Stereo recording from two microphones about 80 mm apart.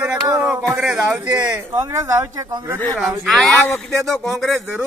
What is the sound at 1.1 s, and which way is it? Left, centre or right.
Speech, centre.